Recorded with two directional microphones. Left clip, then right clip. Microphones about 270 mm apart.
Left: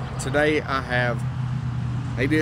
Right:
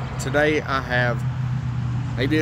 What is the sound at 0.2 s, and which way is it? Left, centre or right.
Speech, centre.